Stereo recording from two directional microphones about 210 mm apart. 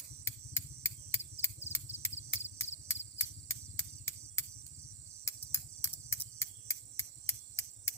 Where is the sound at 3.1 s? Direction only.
10° left (ahead or behind).